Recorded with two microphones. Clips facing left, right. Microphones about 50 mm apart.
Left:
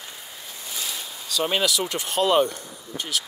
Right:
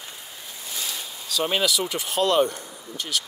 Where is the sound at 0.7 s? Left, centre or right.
Centre.